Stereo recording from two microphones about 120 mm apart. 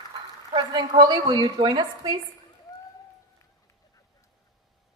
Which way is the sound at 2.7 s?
30° left (ahead or behind).